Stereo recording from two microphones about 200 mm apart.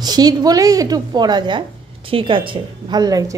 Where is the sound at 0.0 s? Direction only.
20° right (ahead or behind).